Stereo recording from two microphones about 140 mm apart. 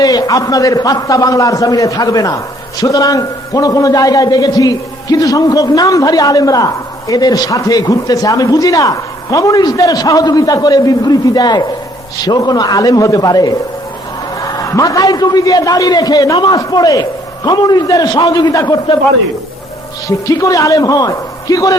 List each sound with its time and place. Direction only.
0.0 s speech: 30° left (ahead or behind)
20.1 s speech: 25° left (ahead or behind)